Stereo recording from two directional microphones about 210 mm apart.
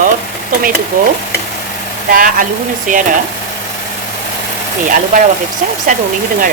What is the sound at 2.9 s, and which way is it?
Stir, 40° right (ahead or behind).